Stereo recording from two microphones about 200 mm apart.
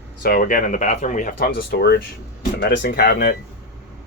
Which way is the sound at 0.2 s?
45° left (ahead or behind).